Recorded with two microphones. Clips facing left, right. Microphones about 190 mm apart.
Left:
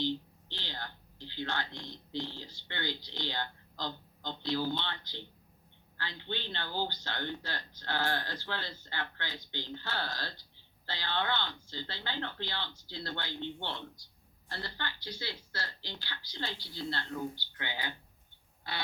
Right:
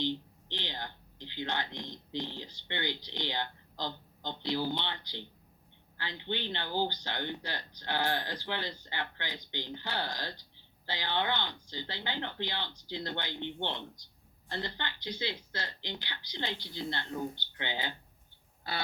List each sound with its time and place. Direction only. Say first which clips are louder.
0.0 s speech: even; 15° right (ahead or behind)